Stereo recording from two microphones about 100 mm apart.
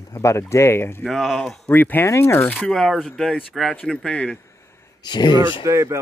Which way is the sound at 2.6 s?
5° left (ahead or behind).